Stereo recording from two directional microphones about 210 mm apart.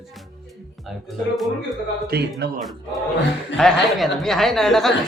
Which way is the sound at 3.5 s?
Centre (ahead or behind).